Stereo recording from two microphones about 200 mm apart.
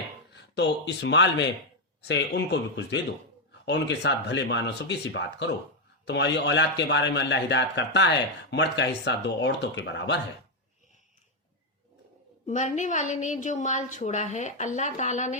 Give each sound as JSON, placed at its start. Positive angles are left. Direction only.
{"t": 0.3, "sound": "a man's voice", "side_deg": 60}
{"t": 12.5, "sound": "a woman's voice", "side_deg": 35}